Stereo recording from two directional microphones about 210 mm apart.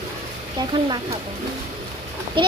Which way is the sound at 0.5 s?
20° right (ahead or behind).